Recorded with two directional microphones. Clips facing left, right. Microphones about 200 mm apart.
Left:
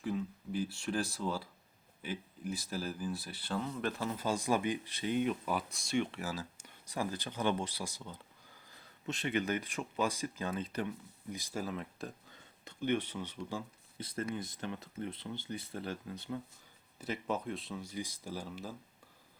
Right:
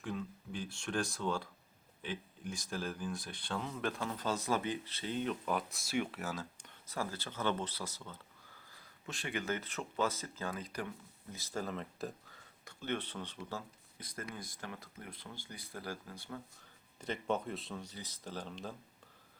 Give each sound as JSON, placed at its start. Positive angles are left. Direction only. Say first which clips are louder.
{"t": 0.0, "sound": "speech", "louder": "left 4 dB", "side_deg": 5}
{"t": 6.8, "sound": "speech", "louder": "left 3 dB", "side_deg": 15}
{"t": 11.3, "sound": "speech", "louder": "left 1 dB", "side_deg": 15}
{"t": 12.3, "sound": "speech", "louder": "left 3 dB", "side_deg": 20}
{"t": 14.0, "sound": "speech", "louder": "left 7 dB", "side_deg": 25}
{"t": 17.0, "sound": "speech", "louder": "even", "side_deg": 5}